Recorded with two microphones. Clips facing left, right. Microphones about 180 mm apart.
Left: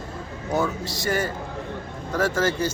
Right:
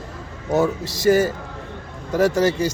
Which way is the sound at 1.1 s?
25° right (ahead or behind).